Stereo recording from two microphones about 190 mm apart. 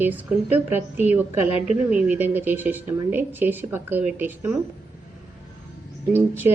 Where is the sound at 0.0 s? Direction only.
10° right (ahead or behind).